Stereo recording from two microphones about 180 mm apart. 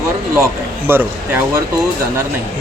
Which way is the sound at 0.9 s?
10° right (ahead or behind).